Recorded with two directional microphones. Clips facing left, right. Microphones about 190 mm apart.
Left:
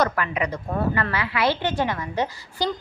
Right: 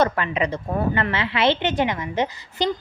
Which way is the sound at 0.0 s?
25° right (ahead or behind).